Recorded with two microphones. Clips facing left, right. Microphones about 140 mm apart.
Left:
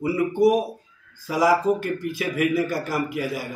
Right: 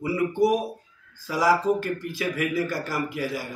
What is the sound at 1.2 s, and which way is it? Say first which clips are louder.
Speech: left 2 dB; 15° left (ahead or behind).